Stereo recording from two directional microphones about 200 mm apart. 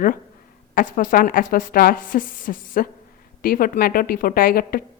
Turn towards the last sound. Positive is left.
turn(degrees=45)  # may be behind; listen again after turning